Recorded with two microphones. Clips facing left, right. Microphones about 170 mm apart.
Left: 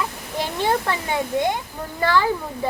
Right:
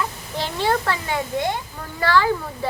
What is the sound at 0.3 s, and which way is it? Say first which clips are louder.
A child's voice: even; 15° left (ahead or behind).